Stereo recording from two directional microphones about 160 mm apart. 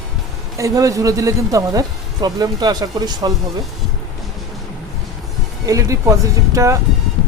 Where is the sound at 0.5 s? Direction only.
20° right (ahead or behind).